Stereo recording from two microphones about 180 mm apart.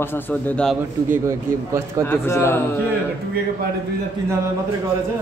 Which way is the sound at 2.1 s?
15° left (ahead or behind).